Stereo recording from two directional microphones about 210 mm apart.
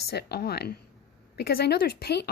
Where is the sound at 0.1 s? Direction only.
50° left (ahead or behind).